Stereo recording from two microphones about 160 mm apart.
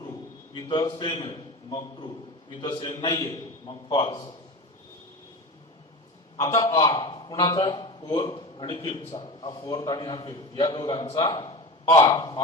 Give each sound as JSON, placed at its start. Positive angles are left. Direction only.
{"t": 0.0, "sound": "a man's voice", "side_deg": 25}
{"t": 6.4, "sound": "a man's voice", "side_deg": 20}